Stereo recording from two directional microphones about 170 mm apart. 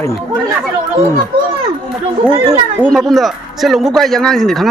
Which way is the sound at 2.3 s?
20° right (ahead or behind).